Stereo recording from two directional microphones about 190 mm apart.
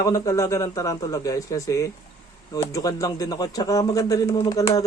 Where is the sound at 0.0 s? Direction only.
15° left (ahead or behind).